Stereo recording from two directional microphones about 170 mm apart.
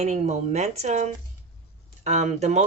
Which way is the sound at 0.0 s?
40° right (ahead or behind).